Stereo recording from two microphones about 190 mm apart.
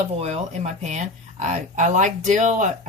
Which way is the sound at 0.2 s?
35° right (ahead or behind).